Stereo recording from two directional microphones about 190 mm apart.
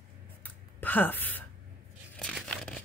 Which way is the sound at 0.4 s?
10° left (ahead or behind).